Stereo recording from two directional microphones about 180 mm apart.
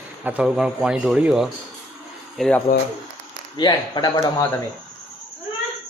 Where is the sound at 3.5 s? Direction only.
25° left (ahead or behind).